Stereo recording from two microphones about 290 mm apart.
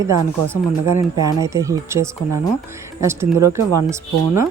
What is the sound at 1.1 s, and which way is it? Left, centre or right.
Speech, centre.